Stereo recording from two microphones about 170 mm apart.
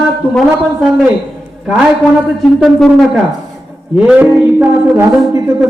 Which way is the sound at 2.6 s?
Centre (ahead or behind).